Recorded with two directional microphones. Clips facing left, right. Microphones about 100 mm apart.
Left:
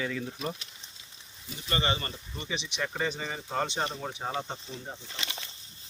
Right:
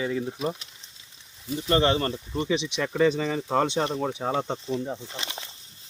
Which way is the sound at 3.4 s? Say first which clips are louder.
Right 7 dB; 90° right.